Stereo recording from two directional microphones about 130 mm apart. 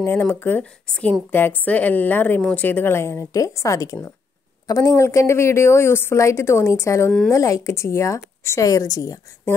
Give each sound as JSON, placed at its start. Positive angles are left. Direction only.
{"t": 0.0, "sound": "a woman's voice", "side_deg": 15}